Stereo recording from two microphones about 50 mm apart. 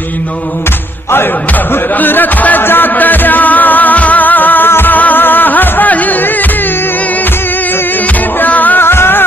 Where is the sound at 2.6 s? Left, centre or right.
Left.